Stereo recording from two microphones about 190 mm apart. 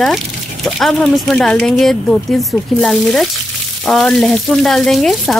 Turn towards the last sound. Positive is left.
turn(degrees=0)  # may be behind; listen again after turning